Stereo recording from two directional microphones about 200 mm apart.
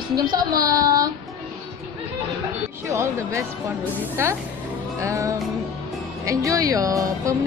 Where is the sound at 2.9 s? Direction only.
15° right (ahead or behind).